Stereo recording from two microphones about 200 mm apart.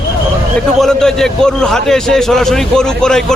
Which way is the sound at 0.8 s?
5° left (ahead or behind).